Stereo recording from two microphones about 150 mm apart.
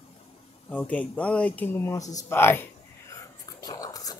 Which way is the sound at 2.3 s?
15° left (ahead or behind).